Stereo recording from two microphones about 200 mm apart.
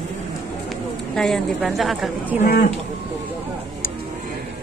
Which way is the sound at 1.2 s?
Centre (ahead or behind).